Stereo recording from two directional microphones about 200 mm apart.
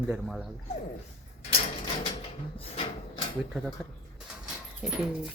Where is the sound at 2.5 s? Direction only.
30° left (ahead or behind).